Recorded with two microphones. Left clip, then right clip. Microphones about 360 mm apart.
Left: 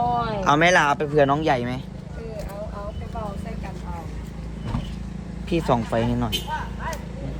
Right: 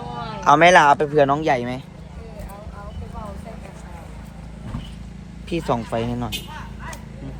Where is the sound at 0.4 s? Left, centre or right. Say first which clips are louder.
Right 6 dB; centre.